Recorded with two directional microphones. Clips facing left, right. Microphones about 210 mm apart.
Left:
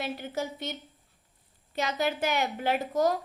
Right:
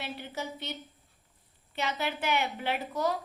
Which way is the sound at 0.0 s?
45° left (ahead or behind).